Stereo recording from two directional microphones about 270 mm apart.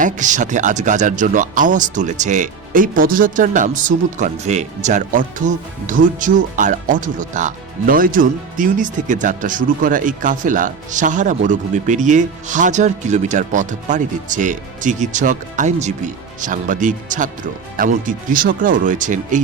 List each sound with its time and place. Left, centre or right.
0.0 s speech: right